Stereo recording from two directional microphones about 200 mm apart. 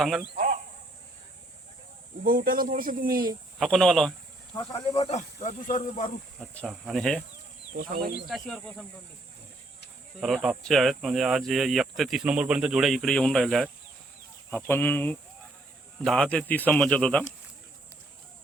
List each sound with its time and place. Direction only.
0.3 s a sound: 40° right (ahead or behind)
2.2 s speech: 45° right (ahead or behind)
3.6 s speech: centre (ahead or behind)
4.5 s speech: 25° left (ahead or behind); by 6.1 s 40° left (ahead or behind)
6.5 s speech: 5° left (ahead or behind)
8.3 s speech: centre (ahead or behind)
10.2 s speech: centre (ahead or behind)